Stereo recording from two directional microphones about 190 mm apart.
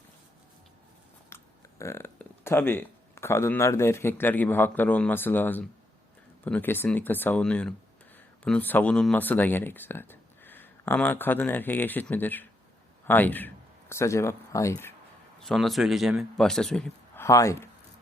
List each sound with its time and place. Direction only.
1.3 s burping: 15° left (ahead or behind)
1.8 s speech: 15° left (ahead or behind)
15.4 s a man's voice: centre (ahead or behind)
17.2 s speech: 15° left (ahead or behind)